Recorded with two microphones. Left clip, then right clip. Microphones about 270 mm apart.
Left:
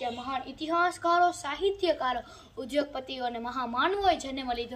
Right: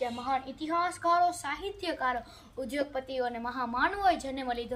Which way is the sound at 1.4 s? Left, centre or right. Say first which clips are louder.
Left 6 dB; centre.